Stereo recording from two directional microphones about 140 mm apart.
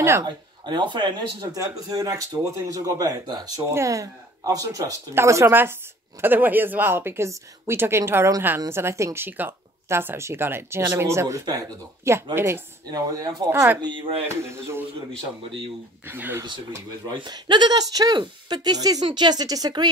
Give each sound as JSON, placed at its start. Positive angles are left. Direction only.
{"t": 0.0, "sound": "speech", "side_deg": -20}
{"t": 0.7, "sound": "a woman's voice", "side_deg": -35}
{"t": 13.5, "sound": "a woman's voice", "side_deg": -15}
{"t": 13.7, "sound": "speech", "side_deg": -35}
{"t": 14.2, "sound": "speech", "side_deg": -20}
{"t": 16.1, "sound": "a woman's voice", "side_deg": -15}
{"t": 17.1, "sound": "speech", "side_deg": -35}